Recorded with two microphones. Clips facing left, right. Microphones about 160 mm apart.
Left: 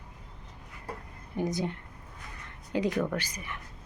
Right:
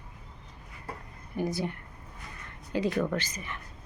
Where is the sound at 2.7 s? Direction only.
15° left (ahead or behind).